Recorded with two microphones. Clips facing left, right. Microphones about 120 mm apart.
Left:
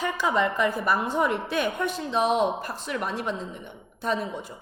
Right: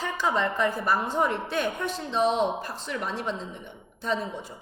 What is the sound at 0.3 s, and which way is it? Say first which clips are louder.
A woman's voice: left 3 dB; 10° left (ahead or behind).